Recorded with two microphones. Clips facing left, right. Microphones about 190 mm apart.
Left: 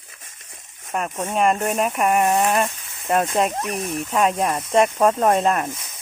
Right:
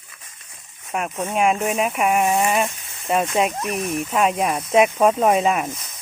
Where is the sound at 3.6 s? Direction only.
35° left (ahead or behind).